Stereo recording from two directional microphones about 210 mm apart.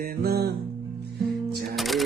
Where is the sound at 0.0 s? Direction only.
45° right (ahead or behind).